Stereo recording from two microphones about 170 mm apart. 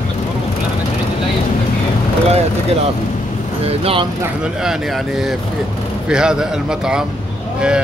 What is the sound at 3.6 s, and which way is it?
Speech, 35° right (ahead or behind).